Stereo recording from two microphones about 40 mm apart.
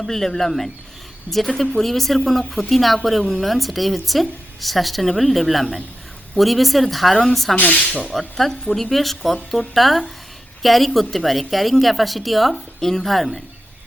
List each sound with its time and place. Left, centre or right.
0.1 s a woman's voice: centre
7.5 s speech: left
8.4 s a woman's voice: centre